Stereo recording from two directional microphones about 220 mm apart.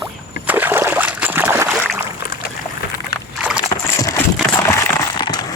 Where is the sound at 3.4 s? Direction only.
5° right (ahead or behind).